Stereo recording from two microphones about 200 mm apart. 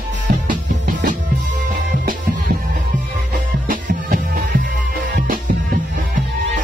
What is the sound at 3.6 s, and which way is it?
Music, 45° right (ahead or behind).